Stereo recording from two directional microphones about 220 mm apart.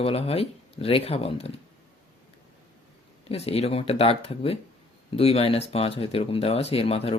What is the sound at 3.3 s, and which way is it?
Speech, 30° left (ahead or behind).